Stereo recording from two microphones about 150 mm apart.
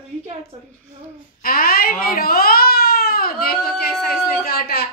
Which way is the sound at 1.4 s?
80° left.